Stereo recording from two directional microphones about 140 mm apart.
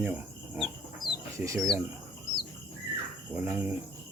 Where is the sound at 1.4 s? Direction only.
20° right (ahead or behind).